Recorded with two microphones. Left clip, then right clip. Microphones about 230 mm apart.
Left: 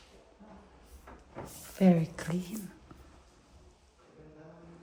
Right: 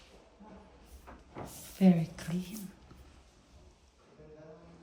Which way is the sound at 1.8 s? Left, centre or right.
Left.